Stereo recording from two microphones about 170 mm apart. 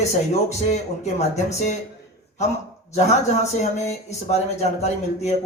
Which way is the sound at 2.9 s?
40° left (ahead or behind).